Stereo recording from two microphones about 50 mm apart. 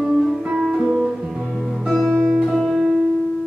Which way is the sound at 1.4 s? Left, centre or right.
Centre.